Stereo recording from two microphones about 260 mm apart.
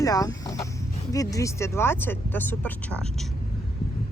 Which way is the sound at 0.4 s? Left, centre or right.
Centre.